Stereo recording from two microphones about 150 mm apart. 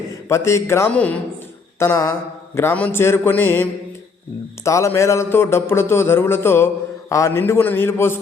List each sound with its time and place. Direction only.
0.3 s a man's voice: 20° left (ahead or behind)